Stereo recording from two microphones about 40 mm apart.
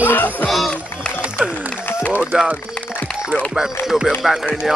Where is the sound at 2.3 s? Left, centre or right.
Right.